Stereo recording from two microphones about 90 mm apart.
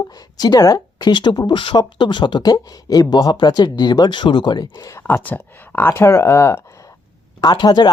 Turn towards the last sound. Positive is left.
turn(degrees=50)  # may be behind; listen again after turning